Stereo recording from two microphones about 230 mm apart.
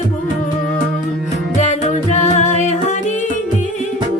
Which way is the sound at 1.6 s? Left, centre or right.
Left.